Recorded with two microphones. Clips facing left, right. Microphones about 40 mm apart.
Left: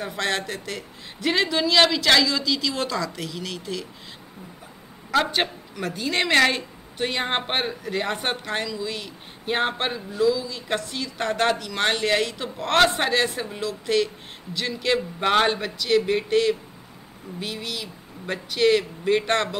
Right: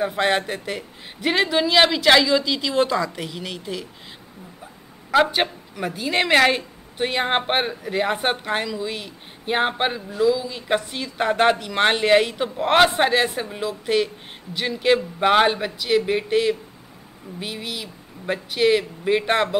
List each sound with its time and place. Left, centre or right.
0.0 s a woman's voice: centre
5.1 s a woman's voice: centre